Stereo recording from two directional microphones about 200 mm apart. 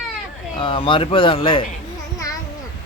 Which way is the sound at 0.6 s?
25° left (ahead or behind).